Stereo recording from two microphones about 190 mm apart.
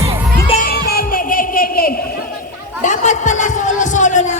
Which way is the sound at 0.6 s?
55° left (ahead or behind).